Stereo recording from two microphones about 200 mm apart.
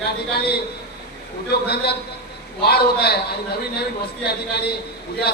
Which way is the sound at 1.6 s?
55° left (ahead or behind).